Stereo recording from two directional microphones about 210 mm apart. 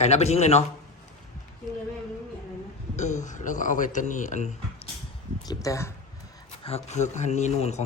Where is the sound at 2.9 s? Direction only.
35° left (ahead or behind).